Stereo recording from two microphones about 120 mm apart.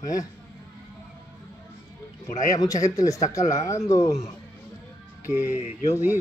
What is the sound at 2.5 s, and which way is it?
Speech, 30° left (ahead or behind).